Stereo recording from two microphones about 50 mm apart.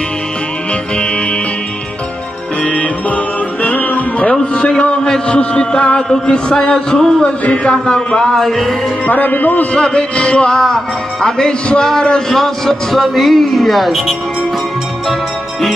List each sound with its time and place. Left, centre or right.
2.6 s music: left
4.4 s a man's voice: centre
7.2 s a man's voice: left; by 8.7 s centre
9.0 s a man's voice: left
9.8 s a sound: centre
10.6 s a man's voice: centre